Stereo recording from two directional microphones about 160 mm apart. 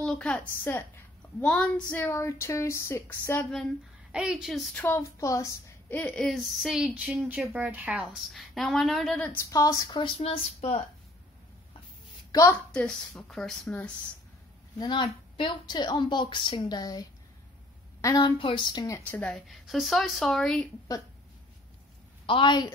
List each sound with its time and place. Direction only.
0.0 s a woman's voice: 5° left (ahead or behind)
4.1 s a woman's voice: 5° right (ahead or behind)
4.8 s a woman's voice: 20° left (ahead or behind)
9.5 s a woman's voice: 20° left (ahead or behind)
9.8 s speech: 30° left (ahead or behind)
12.3 s a woman's voice: 20° left (ahead or behind)
12.7 s a woman's voice: 5° left (ahead or behind)
14.8 s a woman's voice: 30° left (ahead or behind); by 20.6 s 5° left (ahead or behind)
22.2 s a woman's voice: 30° left (ahead or behind)